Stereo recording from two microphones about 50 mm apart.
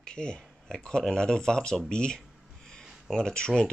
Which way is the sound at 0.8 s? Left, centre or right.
Centre.